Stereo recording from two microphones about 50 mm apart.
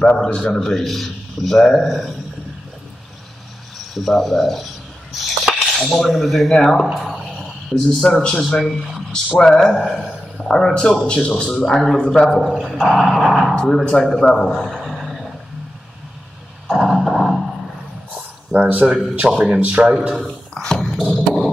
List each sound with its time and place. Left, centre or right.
0.2 s speech: centre
3.7 s a sound: centre
5.8 s speech: centre
10.5 s speech: centre
13.6 s speech: centre
14.2 s a sound: centre
16.7 s a sound: centre
18.5 s speech: right
18.9 s speech: centre
20.6 s beatboxing: centre
20.9 s beatboxing: centre